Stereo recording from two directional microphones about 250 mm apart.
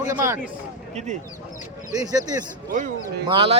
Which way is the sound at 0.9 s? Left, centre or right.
Right.